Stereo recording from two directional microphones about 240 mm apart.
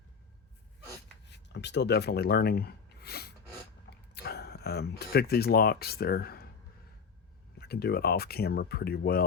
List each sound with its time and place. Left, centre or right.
1.3 s speech: left
7.6 s speech: left